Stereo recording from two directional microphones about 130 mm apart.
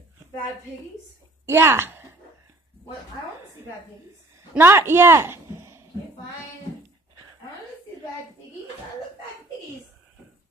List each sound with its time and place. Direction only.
1.4 s a woman's voice: 20° right (ahead or behind)
4.6 s a man's voice: 15° right (ahead or behind)